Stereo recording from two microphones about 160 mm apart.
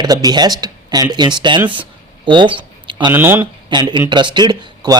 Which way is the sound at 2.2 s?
30° right (ahead or behind).